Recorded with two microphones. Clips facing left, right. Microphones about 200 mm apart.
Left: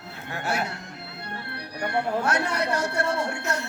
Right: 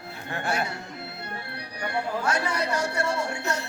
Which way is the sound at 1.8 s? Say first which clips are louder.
Left 2 dB; 60° left (ahead or behind).